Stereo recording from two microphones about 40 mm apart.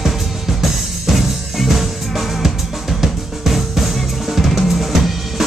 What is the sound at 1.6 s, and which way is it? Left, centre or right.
Music, centre.